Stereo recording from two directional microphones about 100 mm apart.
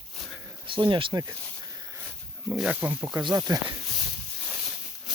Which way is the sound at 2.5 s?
10° right (ahead or behind).